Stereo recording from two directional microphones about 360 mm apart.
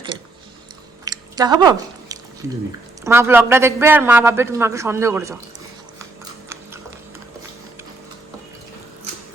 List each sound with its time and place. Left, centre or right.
1.0 s chewing: centre
3.0 s a man's voice: centre